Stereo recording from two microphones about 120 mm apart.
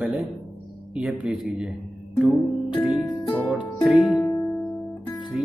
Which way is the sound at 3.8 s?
Centre (ahead or behind).